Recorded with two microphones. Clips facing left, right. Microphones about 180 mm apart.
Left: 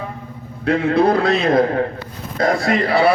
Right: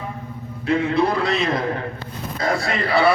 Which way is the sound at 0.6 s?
60° left (ahead or behind).